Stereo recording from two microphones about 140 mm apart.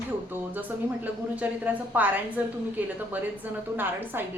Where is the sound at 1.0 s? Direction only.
10° right (ahead or behind).